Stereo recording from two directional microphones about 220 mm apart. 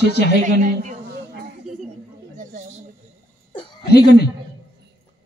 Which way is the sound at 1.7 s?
Centre (ahead or behind).